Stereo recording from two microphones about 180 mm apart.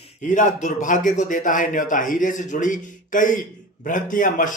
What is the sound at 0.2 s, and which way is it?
Speech, 45° left (ahead or behind).